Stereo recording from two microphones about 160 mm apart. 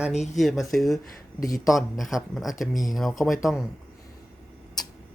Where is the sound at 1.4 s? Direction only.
20° left (ahead or behind).